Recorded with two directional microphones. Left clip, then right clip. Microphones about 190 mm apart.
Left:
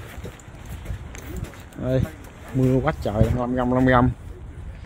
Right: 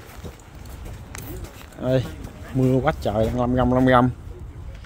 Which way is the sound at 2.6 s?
Centre (ahead or behind).